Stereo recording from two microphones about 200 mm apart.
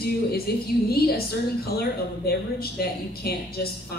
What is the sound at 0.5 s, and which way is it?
A woman's voice, 50° left (ahead or behind).